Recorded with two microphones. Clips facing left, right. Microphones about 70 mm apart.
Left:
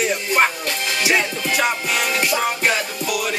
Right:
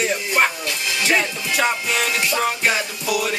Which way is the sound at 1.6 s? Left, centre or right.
Centre.